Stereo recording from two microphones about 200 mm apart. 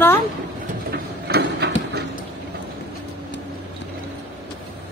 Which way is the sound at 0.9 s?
55° right (ahead or behind).